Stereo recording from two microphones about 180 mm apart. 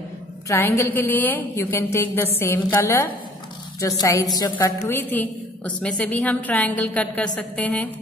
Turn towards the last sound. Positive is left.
turn(degrees=5)  # may be behind; listen again after turning